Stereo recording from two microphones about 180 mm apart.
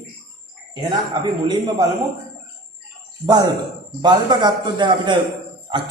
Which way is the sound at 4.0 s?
25° right (ahead or behind).